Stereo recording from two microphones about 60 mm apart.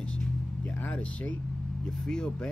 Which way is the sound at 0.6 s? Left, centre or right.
Left.